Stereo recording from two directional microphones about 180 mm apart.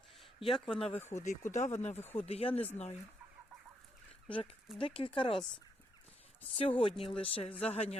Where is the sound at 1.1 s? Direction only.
40° left (ahead or behind).